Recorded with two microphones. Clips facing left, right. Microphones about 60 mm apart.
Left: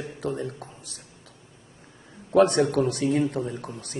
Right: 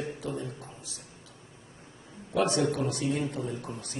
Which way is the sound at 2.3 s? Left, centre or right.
Left.